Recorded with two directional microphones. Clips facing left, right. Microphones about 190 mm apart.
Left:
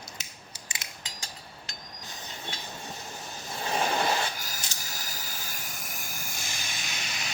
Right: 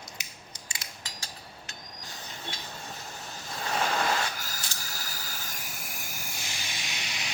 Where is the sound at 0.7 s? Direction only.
20° left (ahead or behind).